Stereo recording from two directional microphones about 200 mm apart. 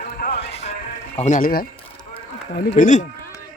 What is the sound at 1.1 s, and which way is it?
Speech, 40° left (ahead or behind).